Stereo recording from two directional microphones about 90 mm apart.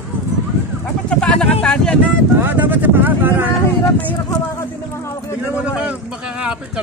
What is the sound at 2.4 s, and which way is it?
Speech, 20° right (ahead or behind).